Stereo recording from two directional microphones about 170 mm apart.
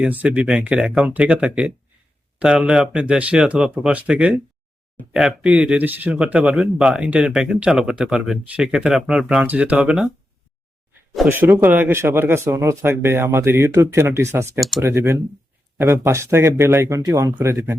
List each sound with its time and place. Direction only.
0.0 s a man's voice: 5° right (ahead or behind)
11.3 s speech: 10° right (ahead or behind)